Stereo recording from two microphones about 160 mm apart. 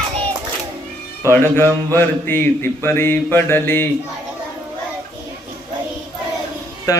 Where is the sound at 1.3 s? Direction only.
15° left (ahead or behind).